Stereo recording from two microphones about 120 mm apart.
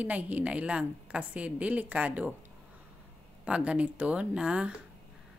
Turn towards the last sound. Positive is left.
turn(degrees=-10)  # may be behind; listen again after turning